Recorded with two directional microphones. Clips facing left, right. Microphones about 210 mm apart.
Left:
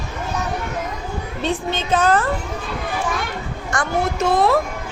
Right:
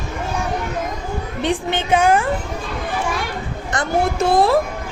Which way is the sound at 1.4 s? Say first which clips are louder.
Right 2 dB; 15° right (ahead or behind).